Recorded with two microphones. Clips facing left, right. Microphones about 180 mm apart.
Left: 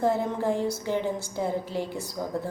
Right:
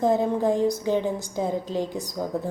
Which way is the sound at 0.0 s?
15° right (ahead or behind).